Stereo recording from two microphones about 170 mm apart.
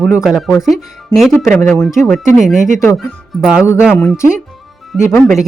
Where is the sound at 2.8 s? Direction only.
Centre (ahead or behind).